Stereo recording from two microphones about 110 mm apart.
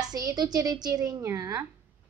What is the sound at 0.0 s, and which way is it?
A woman's voice, 35° right (ahead or behind).